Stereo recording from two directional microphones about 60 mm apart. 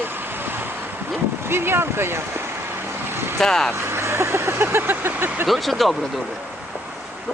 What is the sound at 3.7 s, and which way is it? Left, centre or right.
Vehicle, right.